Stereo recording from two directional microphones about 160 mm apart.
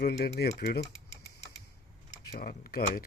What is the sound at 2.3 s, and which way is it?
Speech, 65° left (ahead or behind).